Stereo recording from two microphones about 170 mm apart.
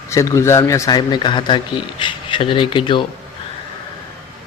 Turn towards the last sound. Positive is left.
turn(degrees=30)  # may be behind; listen again after turning